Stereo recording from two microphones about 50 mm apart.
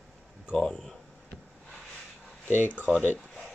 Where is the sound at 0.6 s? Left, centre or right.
Centre.